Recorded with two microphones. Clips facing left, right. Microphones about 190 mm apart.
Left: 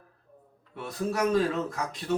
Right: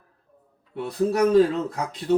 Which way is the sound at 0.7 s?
35° right (ahead or behind).